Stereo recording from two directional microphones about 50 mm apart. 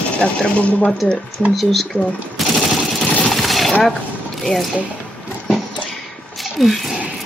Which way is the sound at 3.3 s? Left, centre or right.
Centre.